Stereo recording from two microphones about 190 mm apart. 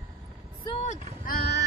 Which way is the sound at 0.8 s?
45° left (ahead or behind).